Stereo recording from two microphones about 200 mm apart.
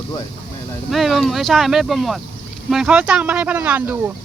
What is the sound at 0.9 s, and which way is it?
Speech, centre (ahead or behind).